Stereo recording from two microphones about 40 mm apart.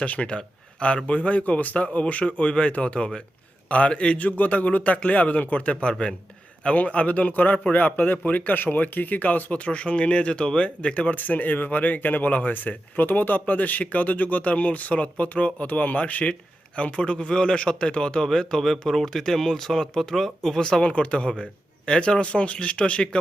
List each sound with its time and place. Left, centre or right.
0.0 s speech: left
5.9 s a man's voice: left
18.3 s speech: centre
20.8 s a man's voice: left